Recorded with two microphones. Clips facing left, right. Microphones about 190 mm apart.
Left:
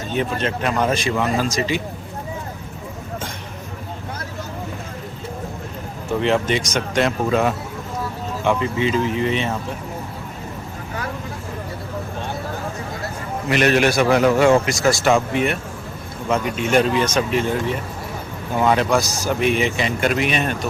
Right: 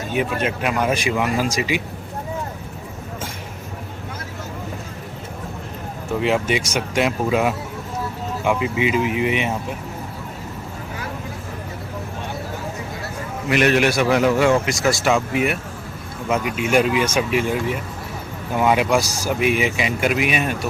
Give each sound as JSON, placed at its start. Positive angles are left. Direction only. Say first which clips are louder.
{"t": 0.4, "sound": "speech", "louder": "even", "side_deg": -10}
{"t": 6.1, "sound": "speech", "louder": "left 1 dB", "side_deg": -5}
{"t": 13.5, "sound": "a man's voice", "louder": "even", "side_deg": 35}
{"t": 14.8, "sound": "speech", "louder": "left 2 dB", "side_deg": 0}
{"t": 16.6, "sound": "speech", "louder": "even", "side_deg": -10}